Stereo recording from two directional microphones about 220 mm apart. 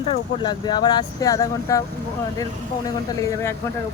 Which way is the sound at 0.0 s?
20° left (ahead or behind).